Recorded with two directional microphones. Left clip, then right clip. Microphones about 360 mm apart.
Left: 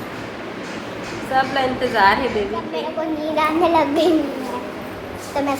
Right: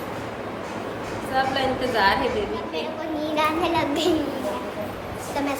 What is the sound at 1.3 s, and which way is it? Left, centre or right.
Speech, centre.